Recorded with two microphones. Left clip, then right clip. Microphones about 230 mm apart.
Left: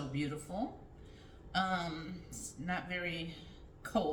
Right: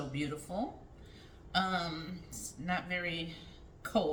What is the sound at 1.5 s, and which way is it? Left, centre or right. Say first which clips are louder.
A woman's voice: right 2 dB; right.